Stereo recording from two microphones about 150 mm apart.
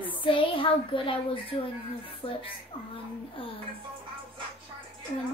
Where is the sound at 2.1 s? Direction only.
35° left (ahead or behind).